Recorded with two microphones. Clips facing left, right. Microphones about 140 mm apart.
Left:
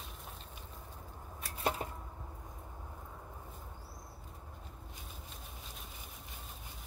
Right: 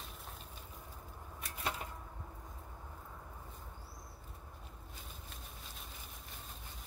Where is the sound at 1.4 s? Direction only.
30° left (ahead or behind).